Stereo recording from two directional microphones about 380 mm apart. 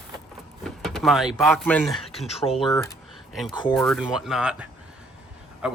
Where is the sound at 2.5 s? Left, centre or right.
Centre.